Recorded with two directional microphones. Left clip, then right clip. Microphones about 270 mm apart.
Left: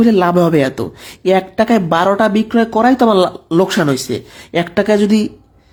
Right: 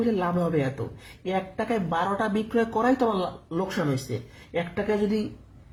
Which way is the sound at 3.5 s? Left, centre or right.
Left.